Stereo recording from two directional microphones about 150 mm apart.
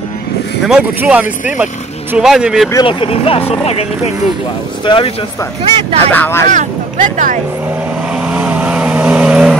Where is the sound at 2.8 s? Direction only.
35° left (ahead or behind).